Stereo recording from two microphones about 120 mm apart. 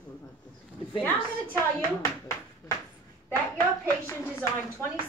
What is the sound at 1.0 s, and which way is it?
Speech, 15° left (ahead or behind).